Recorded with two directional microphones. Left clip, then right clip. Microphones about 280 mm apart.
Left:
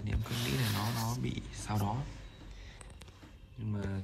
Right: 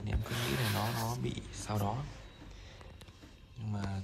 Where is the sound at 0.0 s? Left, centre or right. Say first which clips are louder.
Right 1 dB; centre.